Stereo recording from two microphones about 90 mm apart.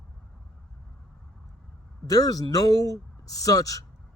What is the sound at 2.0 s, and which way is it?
Speech, 40° left (ahead or behind).